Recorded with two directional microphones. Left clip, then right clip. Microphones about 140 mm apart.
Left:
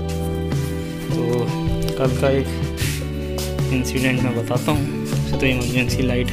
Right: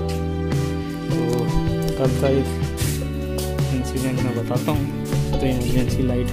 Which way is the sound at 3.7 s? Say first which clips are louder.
Left 4 dB; 5° right (ahead or behind).